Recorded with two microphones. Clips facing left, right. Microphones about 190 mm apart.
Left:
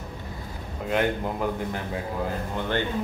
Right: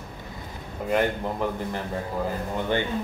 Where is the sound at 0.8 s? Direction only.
Centre (ahead or behind).